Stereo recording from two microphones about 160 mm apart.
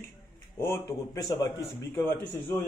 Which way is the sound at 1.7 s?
15° left (ahead or behind).